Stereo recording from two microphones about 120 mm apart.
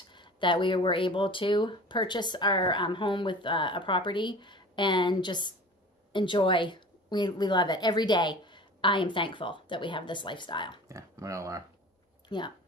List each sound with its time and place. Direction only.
0.1 s speech: 40° left (ahead or behind)
10.9 s speech: 25° right (ahead or behind)
12.3 s speech: 40° left (ahead or behind)